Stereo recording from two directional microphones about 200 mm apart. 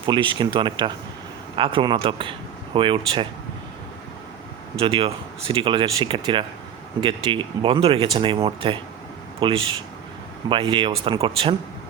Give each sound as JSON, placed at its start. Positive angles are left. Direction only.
{"t": 0.0, "sound": "speech", "side_deg": -25}
{"t": 4.8, "sound": "speech", "side_deg": -30}